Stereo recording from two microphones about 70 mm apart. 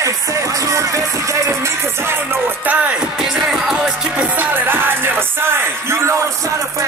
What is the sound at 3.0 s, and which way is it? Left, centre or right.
Music, centre.